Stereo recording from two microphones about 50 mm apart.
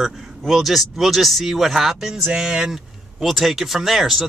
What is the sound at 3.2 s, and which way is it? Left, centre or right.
Speech, centre.